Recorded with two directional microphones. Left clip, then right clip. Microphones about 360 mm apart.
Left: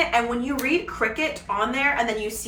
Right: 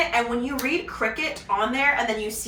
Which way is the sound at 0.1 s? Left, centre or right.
Centre.